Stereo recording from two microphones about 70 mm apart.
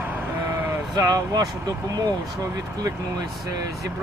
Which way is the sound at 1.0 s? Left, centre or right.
Right.